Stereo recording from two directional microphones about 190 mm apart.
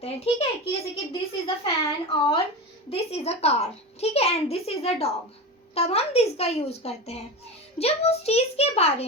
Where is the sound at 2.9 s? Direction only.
35° left (ahead or behind).